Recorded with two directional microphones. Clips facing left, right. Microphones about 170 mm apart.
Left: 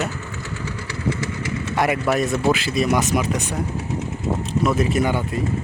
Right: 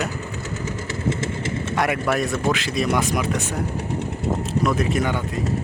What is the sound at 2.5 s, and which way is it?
Speech, 5° left (ahead or behind).